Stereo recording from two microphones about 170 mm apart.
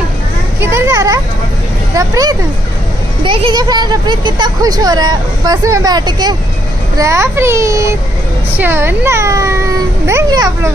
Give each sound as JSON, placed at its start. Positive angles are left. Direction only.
{"t": 0.6, "sound": "children playing", "side_deg": -15}
{"t": 2.0, "sound": "a child's voice", "side_deg": -20}